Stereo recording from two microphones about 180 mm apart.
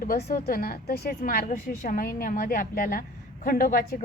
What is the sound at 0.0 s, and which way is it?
A woman's voice, 55° left (ahead or behind).